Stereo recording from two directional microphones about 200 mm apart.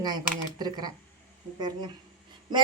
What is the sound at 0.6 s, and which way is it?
Speech, 20° right (ahead or behind).